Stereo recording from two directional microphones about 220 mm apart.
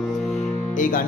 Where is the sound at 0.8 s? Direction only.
40° left (ahead or behind).